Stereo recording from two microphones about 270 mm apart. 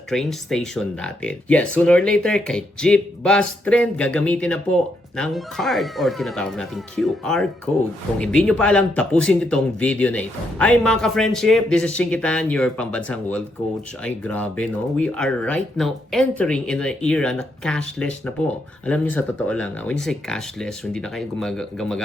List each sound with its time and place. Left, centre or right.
0.1 s speech: centre